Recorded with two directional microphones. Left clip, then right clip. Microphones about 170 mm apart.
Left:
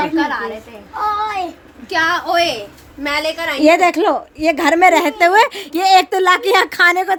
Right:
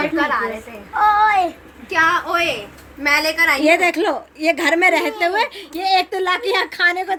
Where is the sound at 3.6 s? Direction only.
40° left (ahead or behind).